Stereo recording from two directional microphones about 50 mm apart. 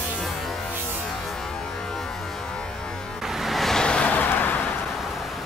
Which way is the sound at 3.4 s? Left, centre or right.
Centre.